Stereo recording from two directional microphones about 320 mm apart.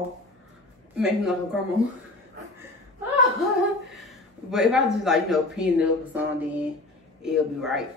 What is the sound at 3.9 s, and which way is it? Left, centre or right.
Speech, centre.